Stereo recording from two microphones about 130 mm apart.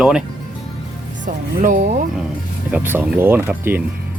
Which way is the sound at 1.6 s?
90° right.